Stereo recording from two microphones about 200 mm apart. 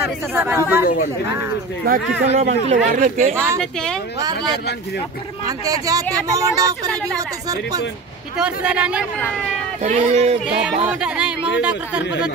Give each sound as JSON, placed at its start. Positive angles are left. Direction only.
{"t": 0.3, "sound": "speech", "side_deg": -10}
{"t": 1.8, "sound": "speech", "side_deg": -50}
{"t": 2.2, "sound": "speech", "side_deg": -35}
{"t": 4.2, "sound": "speech", "side_deg": -20}
{"t": 5.7, "sound": "speech", "side_deg": -15}
{"t": 8.4, "sound": "speech", "side_deg": -5}
{"t": 9.8, "sound": "speech", "side_deg": -35}
{"t": 10.9, "sound": "speech", "side_deg": -5}